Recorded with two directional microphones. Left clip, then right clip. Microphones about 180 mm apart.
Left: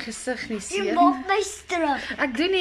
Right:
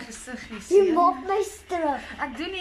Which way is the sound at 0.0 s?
30° left (ahead or behind).